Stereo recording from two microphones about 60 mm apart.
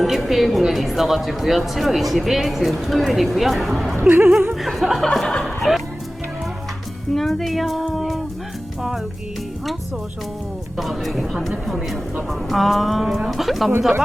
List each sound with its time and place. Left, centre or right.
0.0 s a woman's voice: centre
4.1 s speech: right
4.6 s a woman's voice: centre
7.1 s a woman's voice: centre
10.8 s a woman's voice: centre